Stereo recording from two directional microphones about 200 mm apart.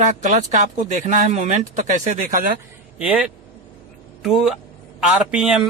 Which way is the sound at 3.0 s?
5° right (ahead or behind).